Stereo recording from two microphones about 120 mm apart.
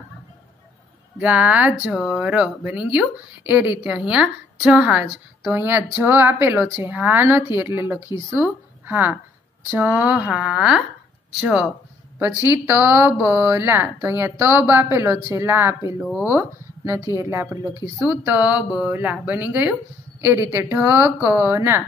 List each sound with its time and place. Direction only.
1.1 s a woman's voice: 10° right (ahead or behind)
12.2 s speech: 20° right (ahead or behind)
16.0 s speech: 5° right (ahead or behind)
16.3 s speech: 20° right (ahead or behind)